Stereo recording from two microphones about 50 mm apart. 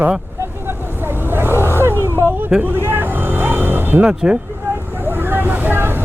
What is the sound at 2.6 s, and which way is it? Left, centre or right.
Vehicle, right.